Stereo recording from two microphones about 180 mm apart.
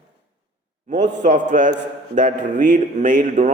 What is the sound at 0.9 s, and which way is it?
A man's voice, 45° right (ahead or behind).